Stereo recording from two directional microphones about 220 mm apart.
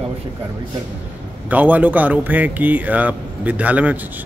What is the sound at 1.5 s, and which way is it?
Speech, 5° right (ahead or behind).